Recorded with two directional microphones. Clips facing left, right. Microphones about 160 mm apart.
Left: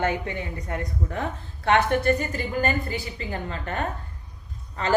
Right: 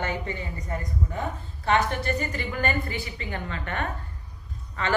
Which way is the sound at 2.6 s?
35° left (ahead or behind).